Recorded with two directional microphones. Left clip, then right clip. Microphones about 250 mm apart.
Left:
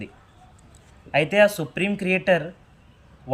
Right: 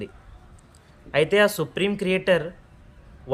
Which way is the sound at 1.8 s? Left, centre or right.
Right.